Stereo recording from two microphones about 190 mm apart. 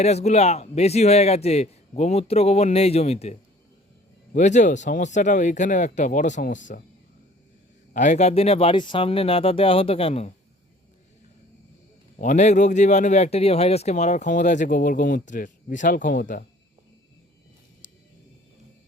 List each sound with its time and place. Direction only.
0.0 s speech: 35° left (ahead or behind)
4.4 s speech: 40° left (ahead or behind)
7.9 s speech: 40° left (ahead or behind)
12.2 s speech: 40° left (ahead or behind)